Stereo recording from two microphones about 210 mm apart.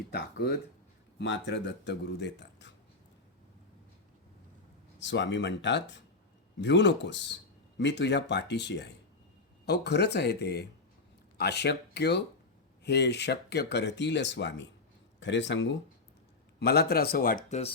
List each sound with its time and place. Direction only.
0.1 s speech: 50° left (ahead or behind)
4.9 s speech: 55° left (ahead or behind)
16.6 s speech: 50° left (ahead or behind)